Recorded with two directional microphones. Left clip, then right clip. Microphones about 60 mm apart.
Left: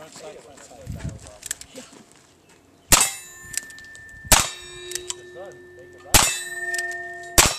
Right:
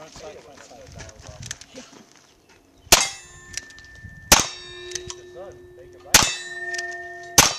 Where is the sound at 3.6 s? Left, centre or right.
Centre.